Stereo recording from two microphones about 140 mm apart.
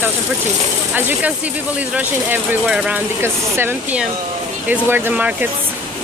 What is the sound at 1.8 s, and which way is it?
Speech, 10° right (ahead or behind).